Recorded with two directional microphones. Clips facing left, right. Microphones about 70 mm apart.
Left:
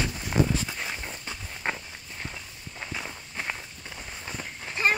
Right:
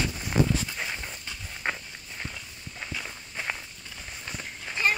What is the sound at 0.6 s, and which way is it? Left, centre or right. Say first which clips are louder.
Walk: even; centre.